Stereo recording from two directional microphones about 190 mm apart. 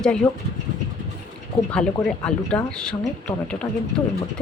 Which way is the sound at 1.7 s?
5° left (ahead or behind).